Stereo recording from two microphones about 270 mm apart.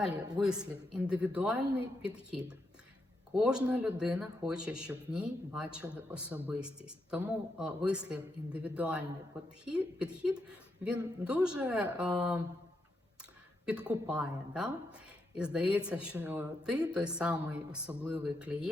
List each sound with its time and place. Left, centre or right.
0.3 s speech: centre
13.7 s speech: centre